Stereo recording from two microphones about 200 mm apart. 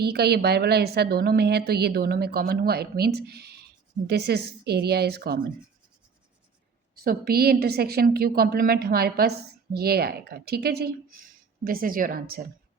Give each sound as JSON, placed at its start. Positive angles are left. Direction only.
{"t": 0.0, "sound": "a woman's voice", "side_deg": -55}
{"t": 6.9, "sound": "a woman's voice", "side_deg": -50}